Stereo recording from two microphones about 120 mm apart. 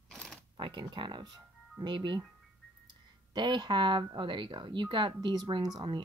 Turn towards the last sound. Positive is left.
turn(degrees=-35)  # may be behind; listen again after turning